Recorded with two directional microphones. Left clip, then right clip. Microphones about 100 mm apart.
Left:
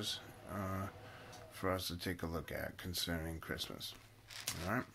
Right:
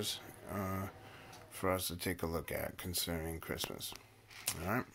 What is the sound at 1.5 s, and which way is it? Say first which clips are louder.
Speech: right 3 dB; 40° right (ahead or behind).